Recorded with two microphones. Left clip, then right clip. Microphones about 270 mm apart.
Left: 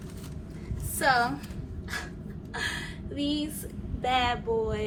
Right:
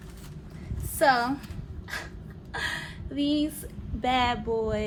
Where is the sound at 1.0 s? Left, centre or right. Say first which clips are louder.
Right 2 dB; right.